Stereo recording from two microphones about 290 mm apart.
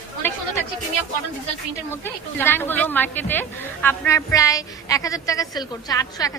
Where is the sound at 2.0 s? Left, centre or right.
Centre.